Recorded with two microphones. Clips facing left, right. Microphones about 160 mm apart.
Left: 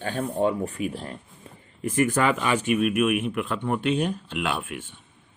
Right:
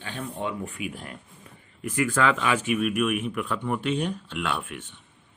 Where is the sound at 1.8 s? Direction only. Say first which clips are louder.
Left 4 dB; 20° left (ahead or behind).